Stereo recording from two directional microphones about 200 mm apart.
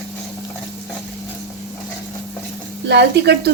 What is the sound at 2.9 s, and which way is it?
Speech, 60° right (ahead or behind).